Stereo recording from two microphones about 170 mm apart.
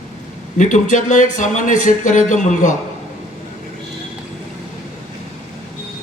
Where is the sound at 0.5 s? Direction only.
45° left (ahead or behind).